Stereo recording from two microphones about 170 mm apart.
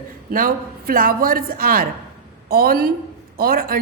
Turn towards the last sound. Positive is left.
turn(degrees=-60)  # may be behind; listen again after turning